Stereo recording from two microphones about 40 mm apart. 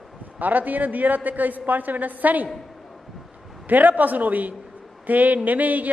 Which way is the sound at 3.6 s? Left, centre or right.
Right.